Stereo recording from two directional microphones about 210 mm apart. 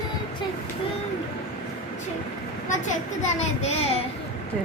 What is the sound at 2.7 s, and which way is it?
A child's voice, 35° left (ahead or behind).